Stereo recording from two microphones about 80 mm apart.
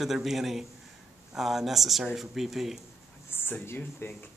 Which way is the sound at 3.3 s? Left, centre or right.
Left.